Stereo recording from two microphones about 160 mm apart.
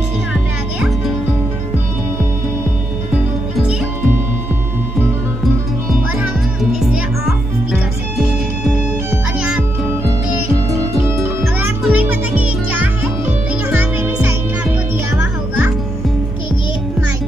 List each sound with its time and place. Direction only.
0.3 s music: 5° right (ahead or behind)
6.1 s music: centre (ahead or behind)
9.1 s music: 5° right (ahead or behind)